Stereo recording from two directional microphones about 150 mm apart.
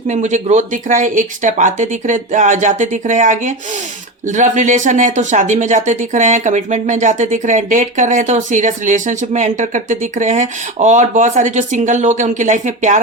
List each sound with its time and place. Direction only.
0.1 s speech: 50° right (ahead or behind)